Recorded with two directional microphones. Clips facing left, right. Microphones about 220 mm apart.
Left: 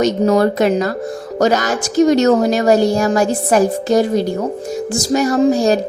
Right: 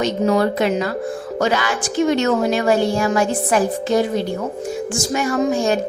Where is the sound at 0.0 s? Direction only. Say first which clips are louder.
Left 4 dB; 40° left (ahead or behind).